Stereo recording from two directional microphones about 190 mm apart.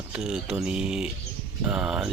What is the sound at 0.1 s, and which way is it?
Speech, 5° right (ahead or behind).